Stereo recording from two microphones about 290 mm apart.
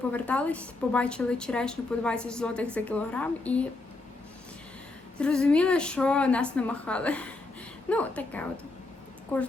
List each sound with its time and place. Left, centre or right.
0.1 s a woman's voice: centre
5.1 s a woman's voice: centre